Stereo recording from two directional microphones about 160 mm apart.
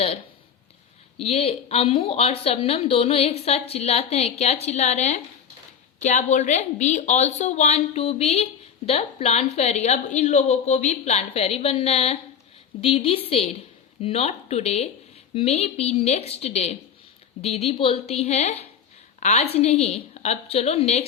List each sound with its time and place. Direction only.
1.2 s a woman's voice: 40° left (ahead or behind)